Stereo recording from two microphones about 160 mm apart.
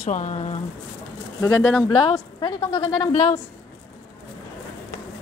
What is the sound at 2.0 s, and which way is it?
Speech, 30° left (ahead or behind).